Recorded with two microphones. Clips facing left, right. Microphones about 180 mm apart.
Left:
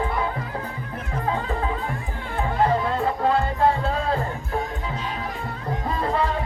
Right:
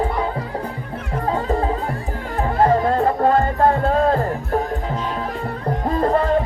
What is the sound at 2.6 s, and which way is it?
Music, 45° right (ahead or behind).